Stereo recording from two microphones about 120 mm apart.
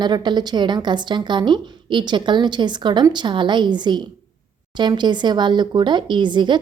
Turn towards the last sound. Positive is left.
turn(degrees=-40)  # may be behind; listen again after turning